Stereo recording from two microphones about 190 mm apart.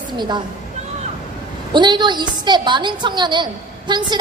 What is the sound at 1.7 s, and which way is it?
A woman's voice, 25° right (ahead or behind).